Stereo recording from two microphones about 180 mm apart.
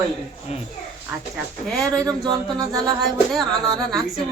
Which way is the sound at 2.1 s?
20° right (ahead or behind).